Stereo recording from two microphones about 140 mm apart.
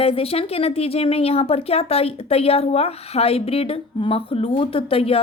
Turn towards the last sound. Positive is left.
turn(degrees=45)  # may be behind; listen again after turning